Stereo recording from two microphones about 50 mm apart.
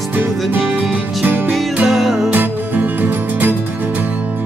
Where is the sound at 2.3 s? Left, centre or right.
Right.